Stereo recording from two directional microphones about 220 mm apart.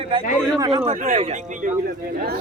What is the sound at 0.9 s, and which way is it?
Speech, 30° right (ahead or behind).